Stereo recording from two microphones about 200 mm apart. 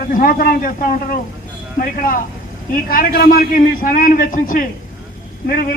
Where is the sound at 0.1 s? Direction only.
45° left (ahead or behind).